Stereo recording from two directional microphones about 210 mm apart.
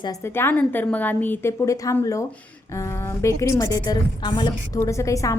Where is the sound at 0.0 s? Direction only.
15° left (ahead or behind).